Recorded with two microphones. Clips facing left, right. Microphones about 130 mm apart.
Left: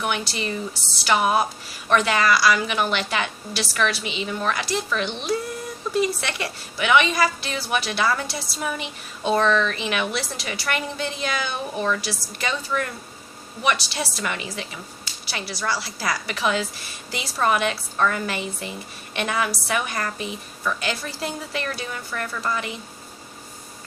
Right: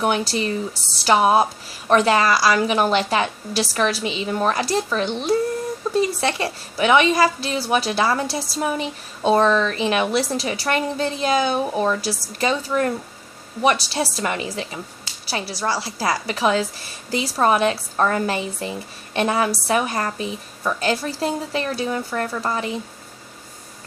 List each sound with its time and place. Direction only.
0.0 s a woman's voice: 35° right (ahead or behind)